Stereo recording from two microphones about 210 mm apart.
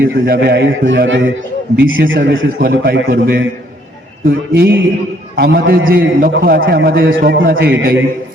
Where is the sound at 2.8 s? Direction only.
45° right (ahead or behind).